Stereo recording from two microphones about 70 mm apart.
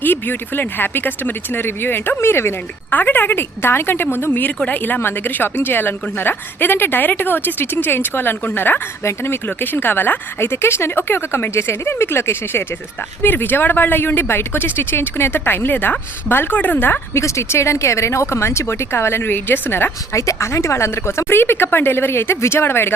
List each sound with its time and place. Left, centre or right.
0.0 s a woman's voice: left
2.9 s a woman's voice: left
17.2 s a woman's voice: left
20.1 s a woman's voice: left